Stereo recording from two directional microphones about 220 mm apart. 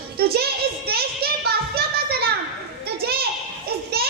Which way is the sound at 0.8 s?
45° right (ahead or behind).